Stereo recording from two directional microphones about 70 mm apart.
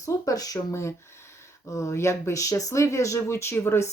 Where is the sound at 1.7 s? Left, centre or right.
Left.